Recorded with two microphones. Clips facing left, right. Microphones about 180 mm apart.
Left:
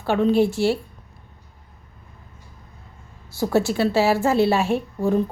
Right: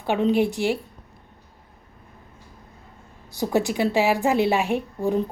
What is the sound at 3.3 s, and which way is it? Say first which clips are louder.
A woman's voice: left 2 dB; 15° right (ahead or behind).